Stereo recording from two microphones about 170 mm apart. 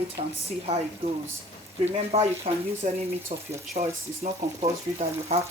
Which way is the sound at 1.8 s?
35° right (ahead or behind).